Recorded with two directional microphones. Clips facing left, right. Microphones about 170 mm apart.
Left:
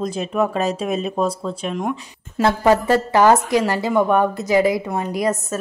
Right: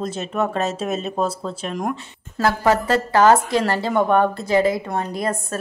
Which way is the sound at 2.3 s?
20° left (ahead or behind).